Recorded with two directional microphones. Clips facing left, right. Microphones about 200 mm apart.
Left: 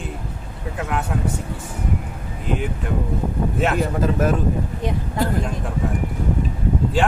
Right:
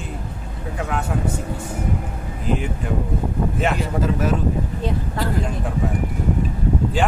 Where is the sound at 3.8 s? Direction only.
50° left (ahead or behind).